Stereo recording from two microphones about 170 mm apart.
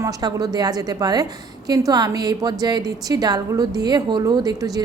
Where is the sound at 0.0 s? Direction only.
25° right (ahead or behind).